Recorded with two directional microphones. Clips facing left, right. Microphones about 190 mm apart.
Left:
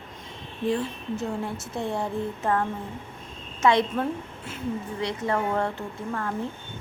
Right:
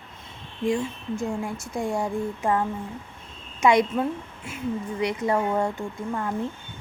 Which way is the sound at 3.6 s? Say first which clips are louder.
Right 2 dB; 15° right (ahead or behind).